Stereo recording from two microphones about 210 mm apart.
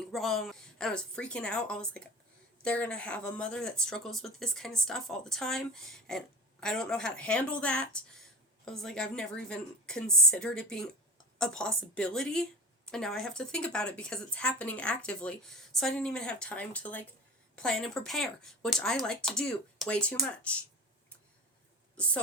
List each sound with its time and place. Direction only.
0.1 s a woman's voice: centre (ahead or behind)